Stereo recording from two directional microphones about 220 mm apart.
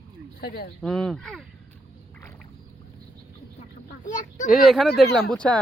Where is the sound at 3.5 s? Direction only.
35° left (ahead or behind).